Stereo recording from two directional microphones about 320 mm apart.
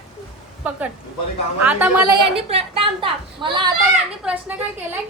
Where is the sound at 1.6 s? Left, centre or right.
Centre.